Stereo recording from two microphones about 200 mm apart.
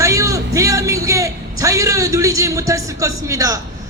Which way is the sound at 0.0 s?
15° right (ahead or behind).